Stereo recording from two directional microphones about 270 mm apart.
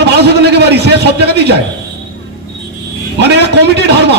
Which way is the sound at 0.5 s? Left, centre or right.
Right.